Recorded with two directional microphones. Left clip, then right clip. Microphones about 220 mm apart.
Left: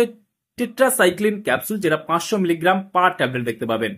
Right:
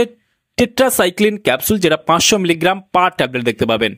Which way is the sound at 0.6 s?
40° right (ahead or behind).